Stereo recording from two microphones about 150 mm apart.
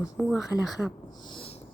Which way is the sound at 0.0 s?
5° right (ahead or behind).